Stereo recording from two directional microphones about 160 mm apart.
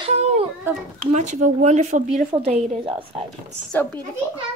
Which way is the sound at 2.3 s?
40° right (ahead or behind).